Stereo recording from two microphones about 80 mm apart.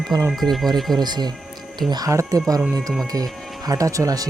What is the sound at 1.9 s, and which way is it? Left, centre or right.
Speech, right.